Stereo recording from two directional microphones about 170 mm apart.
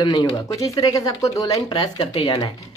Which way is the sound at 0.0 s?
25° left (ahead or behind).